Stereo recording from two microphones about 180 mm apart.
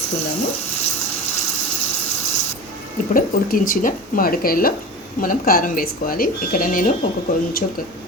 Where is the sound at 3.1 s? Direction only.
50° left (ahead or behind).